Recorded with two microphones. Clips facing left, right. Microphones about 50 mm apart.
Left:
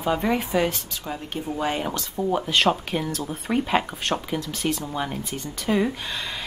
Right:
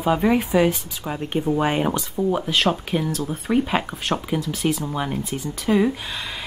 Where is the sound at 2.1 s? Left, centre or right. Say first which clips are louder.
Left 1 dB; centre.